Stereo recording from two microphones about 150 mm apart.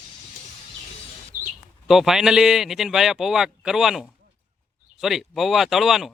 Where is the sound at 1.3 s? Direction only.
65° right (ahead or behind).